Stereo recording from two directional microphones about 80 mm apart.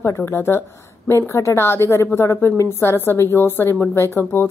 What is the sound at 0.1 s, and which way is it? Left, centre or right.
Speech, left.